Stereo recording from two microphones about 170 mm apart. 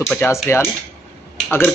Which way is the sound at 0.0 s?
5° left (ahead or behind).